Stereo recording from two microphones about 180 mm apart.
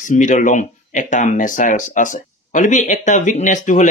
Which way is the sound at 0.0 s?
45° left (ahead or behind).